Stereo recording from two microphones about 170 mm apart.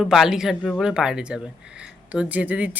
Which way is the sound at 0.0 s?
Centre (ahead or behind).